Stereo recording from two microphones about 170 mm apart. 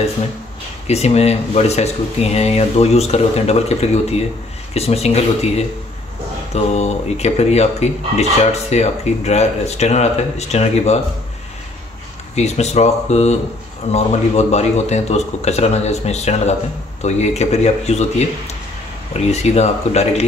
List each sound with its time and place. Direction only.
0.8 s speech: 40° left (ahead or behind)
12.4 s speech: 40° left (ahead or behind)
19.3 s speech: 40° left (ahead or behind)